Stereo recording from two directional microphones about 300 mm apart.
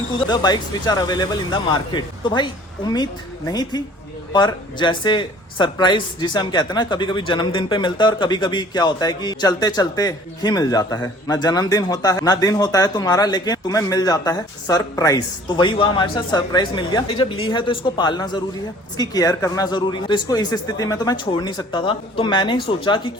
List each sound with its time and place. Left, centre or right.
0.3 s speech: centre